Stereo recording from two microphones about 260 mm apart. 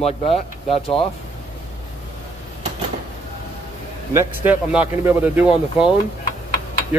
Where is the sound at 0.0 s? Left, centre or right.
Left.